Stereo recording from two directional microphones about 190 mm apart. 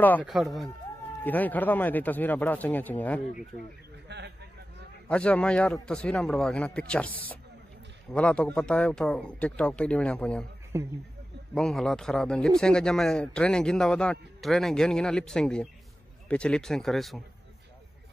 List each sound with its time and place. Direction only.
0.2 s a man's voice: centre (ahead or behind)
4.1 s speech: 65° right (ahead or behind)
5.0 s a man's voice: 5° left (ahead or behind)
10.7 s speech: 15° right (ahead or behind)
11.5 s a man's voice: 5° left (ahead or behind)